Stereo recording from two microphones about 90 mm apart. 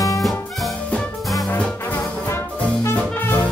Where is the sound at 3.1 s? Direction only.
25° left (ahead or behind).